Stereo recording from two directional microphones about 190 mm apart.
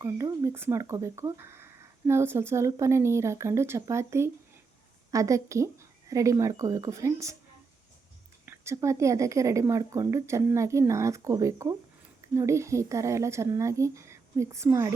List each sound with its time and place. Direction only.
0.0 s speech: 15° right (ahead or behind)
8.4 s speech: 15° right (ahead or behind)